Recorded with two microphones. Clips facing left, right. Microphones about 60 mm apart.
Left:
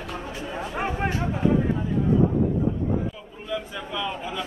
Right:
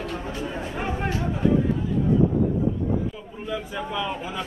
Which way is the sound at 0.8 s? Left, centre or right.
Left.